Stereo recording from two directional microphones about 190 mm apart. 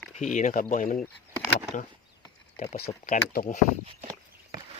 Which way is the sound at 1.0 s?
Centre (ahead or behind).